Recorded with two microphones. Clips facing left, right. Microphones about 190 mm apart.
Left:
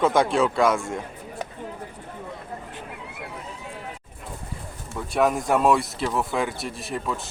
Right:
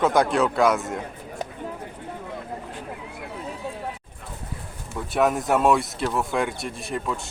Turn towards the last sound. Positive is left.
turn(degrees=0)  # may be behind; listen again after turning